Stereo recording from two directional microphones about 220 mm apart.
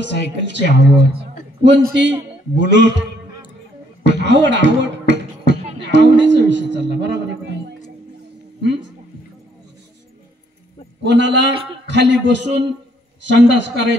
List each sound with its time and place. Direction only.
0.0 s speech: 55° right (ahead or behind)
4.0 s beatboxing: 55° right (ahead or behind)
5.9 s a sound: 55° right (ahead or behind)
11.1 s a man's voice: 55° right (ahead or behind)
11.5 s a man's voice: 25° right (ahead or behind)
11.9 s a man's voice: 55° right (ahead or behind)